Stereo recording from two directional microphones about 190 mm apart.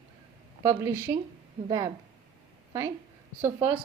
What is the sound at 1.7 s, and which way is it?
Speech, 20° right (ahead or behind).